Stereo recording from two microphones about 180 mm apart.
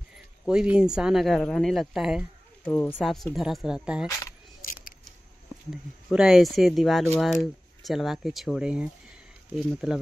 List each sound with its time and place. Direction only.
0.5 s speech: 5° right (ahead or behind)
2.6 s speech: 10° left (ahead or behind)
4.6 s a sound: 50° left (ahead or behind)
6.0 s speech: centre (ahead or behind)